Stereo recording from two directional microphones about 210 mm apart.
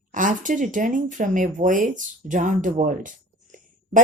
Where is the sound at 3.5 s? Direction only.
40° right (ahead or behind).